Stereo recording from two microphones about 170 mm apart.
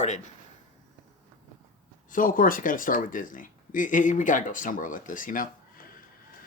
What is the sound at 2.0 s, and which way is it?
Speech, 55° left (ahead or behind).